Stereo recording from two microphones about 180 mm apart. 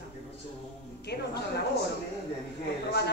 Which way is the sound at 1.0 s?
65° left (ahead or behind).